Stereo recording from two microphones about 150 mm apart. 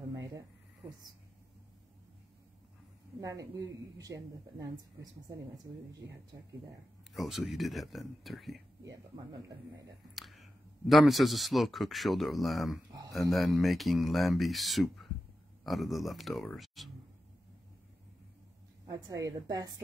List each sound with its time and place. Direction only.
0.1 s a sound: 25° right (ahead or behind)
3.2 s speech: 20° right (ahead or behind)
7.2 s speech: centre (ahead or behind)
8.8 s speech: 25° right (ahead or behind)
10.1 s speech: centre (ahead or behind)
18.9 s speech: 25° right (ahead or behind)